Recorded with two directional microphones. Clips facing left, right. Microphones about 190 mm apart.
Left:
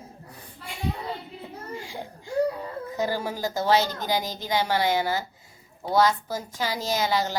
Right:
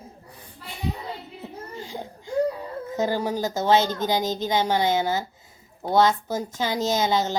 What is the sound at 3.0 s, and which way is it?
Speech, 20° right (ahead or behind).